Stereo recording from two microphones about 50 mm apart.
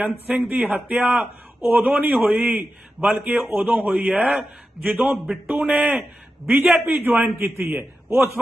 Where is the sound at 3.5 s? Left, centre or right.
Right.